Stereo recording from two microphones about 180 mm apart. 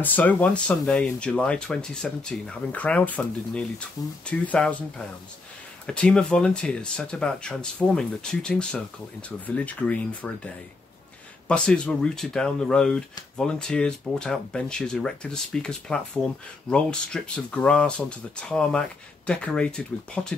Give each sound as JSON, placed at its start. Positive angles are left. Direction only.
{"t": 0.0, "sound": "speech", "side_deg": 10}